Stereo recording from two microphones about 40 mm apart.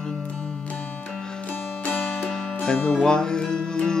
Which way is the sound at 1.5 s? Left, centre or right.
Left.